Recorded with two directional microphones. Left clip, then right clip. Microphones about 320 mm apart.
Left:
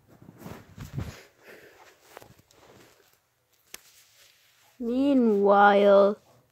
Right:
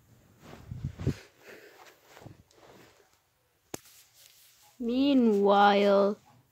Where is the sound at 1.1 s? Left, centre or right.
Centre.